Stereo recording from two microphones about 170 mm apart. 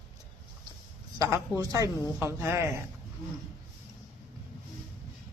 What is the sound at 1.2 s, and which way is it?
Speech, 20° right (ahead or behind).